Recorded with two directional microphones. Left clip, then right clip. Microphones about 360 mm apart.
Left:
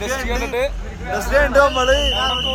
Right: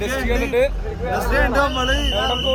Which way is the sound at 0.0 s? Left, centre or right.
Centre.